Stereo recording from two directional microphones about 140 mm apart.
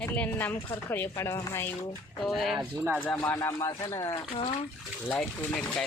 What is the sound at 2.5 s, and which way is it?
Speech, 15° right (ahead or behind).